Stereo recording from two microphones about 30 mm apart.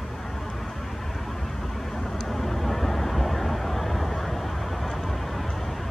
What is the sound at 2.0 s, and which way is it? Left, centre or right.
Vehicle, centre.